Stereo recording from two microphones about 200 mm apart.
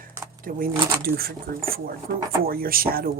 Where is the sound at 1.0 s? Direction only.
50° right (ahead or behind).